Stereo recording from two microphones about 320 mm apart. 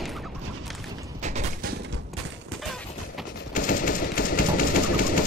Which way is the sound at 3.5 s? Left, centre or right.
Left.